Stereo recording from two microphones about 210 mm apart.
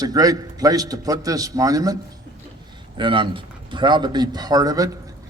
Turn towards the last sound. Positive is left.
turn(degrees=-15)  # may be behind; listen again after turning